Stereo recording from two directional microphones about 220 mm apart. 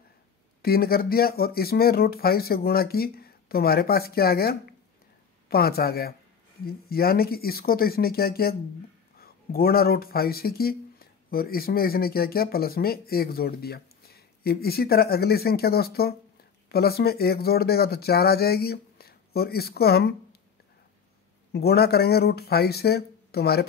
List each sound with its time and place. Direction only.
0.6 s speech: 45° left (ahead or behind)
21.5 s speech: 45° left (ahead or behind)